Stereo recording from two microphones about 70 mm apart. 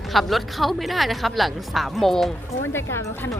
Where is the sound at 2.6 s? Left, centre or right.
Left.